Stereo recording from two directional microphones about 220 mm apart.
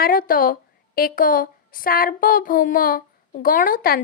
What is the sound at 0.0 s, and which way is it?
A woman's voice, 40° left (ahead or behind).